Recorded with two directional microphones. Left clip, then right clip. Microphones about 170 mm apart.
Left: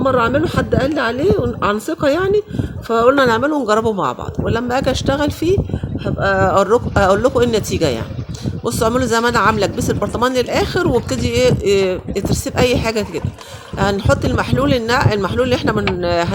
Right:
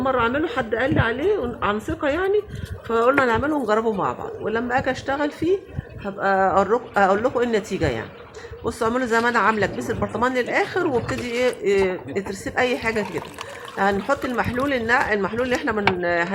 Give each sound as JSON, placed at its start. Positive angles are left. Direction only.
{"t": 0.0, "sound": "a woman's voice", "side_deg": 50}